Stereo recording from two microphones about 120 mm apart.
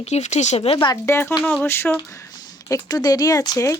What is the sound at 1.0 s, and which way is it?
Speech, 20° left (ahead or behind).